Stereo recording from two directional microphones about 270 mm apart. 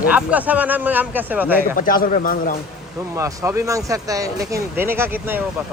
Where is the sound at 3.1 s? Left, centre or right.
Centre.